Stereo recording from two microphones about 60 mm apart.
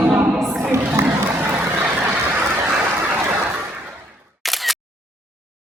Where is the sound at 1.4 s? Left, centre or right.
Right.